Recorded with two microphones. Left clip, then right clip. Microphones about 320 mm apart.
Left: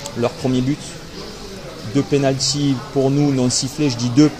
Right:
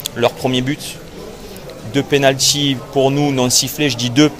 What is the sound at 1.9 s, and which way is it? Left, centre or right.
Speech, right.